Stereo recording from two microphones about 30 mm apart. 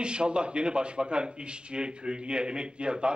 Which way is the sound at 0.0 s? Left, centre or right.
Right.